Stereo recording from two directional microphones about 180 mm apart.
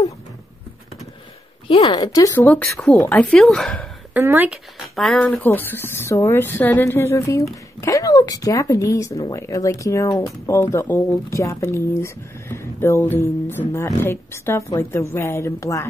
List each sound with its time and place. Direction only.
1.7 s speech: 25° left (ahead or behind); by 3.8 s centre (ahead or behind)
4.1 s speech: 10° right (ahead or behind)
4.9 s speech: centre (ahead or behind)